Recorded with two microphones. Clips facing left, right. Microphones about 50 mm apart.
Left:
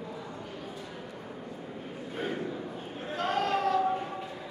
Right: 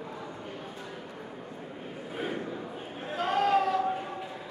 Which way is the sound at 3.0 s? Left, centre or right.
Centre.